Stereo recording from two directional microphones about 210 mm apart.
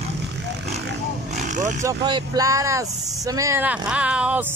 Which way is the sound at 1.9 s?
20° right (ahead or behind).